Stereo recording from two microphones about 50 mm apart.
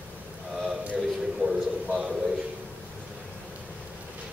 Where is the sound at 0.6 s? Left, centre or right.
Centre.